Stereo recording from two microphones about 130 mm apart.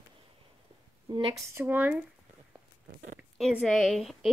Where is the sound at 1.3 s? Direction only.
20° right (ahead or behind).